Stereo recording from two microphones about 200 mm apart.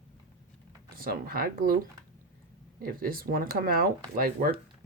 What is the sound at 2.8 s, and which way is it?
Speech, 45° right (ahead or behind).